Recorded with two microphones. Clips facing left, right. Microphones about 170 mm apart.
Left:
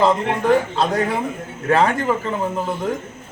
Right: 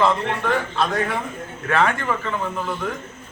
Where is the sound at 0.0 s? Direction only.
35° left (ahead or behind).